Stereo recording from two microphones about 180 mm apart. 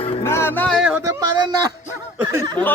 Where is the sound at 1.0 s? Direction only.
20° right (ahead or behind).